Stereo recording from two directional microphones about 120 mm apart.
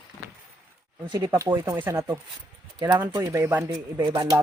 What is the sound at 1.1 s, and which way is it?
Speech, 30° right (ahead or behind).